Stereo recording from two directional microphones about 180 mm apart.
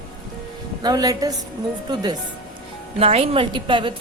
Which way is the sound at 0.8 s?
20° right (ahead or behind).